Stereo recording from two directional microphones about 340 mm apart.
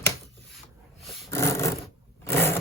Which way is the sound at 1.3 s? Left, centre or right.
Centre.